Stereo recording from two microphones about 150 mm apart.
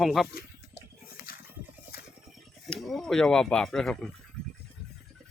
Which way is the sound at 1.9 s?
90° left.